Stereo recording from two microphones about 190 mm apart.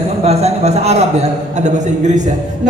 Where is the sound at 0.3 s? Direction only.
35° right (ahead or behind).